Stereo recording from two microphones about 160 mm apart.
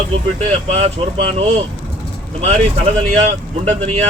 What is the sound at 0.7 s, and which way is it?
Speech, 40° right (ahead or behind).